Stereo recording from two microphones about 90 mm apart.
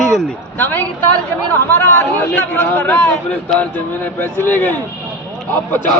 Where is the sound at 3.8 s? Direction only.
20° left (ahead or behind).